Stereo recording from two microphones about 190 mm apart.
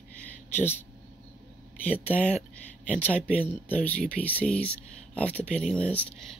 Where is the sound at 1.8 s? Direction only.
10° left (ahead or behind).